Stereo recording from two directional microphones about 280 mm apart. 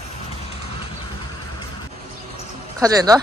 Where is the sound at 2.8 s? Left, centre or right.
Centre.